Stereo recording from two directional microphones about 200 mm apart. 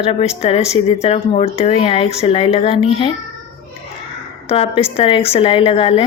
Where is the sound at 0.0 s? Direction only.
30° left (ahead or behind).